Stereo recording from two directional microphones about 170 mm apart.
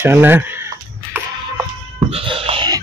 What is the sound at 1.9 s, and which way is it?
Cat, 30° right (ahead or behind).